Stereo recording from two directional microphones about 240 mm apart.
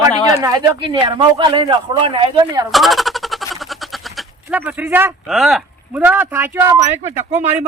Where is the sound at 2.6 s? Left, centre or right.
Centre.